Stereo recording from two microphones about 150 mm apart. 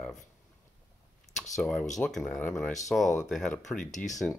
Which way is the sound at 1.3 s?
5° left (ahead or behind).